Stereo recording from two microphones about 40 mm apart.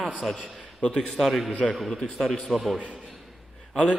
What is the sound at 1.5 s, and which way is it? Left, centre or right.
Speech, left.